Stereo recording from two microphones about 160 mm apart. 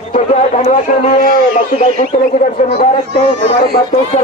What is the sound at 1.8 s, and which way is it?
Speech, 45° left (ahead or behind).